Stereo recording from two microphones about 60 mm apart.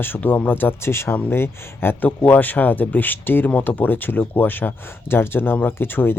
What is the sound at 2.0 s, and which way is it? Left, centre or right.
Speech, left.